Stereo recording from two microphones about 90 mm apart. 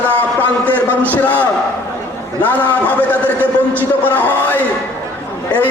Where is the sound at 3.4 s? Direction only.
20° right (ahead or behind).